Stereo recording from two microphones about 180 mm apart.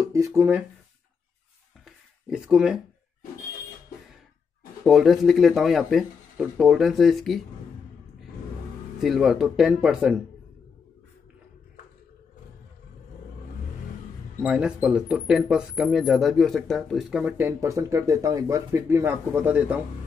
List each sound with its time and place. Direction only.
0.0 s speech: 20° right (ahead or behind)
1.9 s a sound: 5° right (ahead or behind)
4.8 s speech: centre (ahead or behind)
9.0 s speech: centre (ahead or behind)
14.4 s speech: 5° right (ahead or behind)